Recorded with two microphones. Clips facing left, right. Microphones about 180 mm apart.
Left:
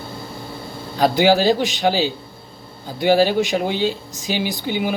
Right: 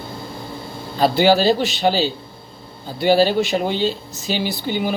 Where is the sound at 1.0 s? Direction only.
15° left (ahead or behind).